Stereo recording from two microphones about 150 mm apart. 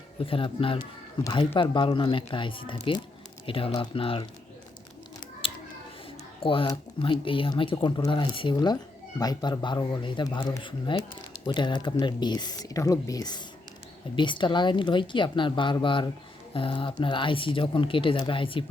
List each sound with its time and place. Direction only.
0.2 s speech: 35° left (ahead or behind)
6.4 s speech: 35° left (ahead or behind)